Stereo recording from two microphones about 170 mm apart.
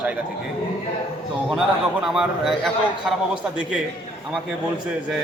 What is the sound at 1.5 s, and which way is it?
A man's voice, centre (ahead or behind).